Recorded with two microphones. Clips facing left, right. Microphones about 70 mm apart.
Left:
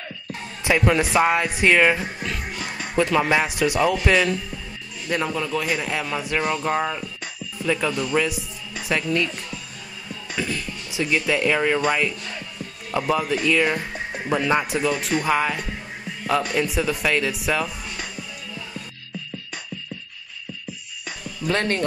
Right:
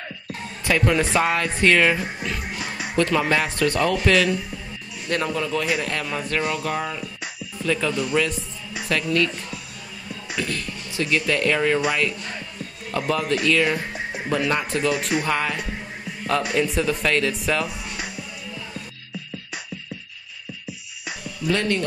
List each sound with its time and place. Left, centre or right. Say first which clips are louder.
0.7 s speech: left 1 dB; centre
2.2 s music: right 1 dB; centre
3.0 s a man's voice: left 1 dB; centre
6.6 s speech: left 3 dB; left
7.6 s speech: even; centre
10.3 s speech: even; centre
12.9 s speech: left 1 dB; centre
14.9 s a man's voice: even; centre
17.6 s music: right 1 dB; centre
21.5 s speech: even; left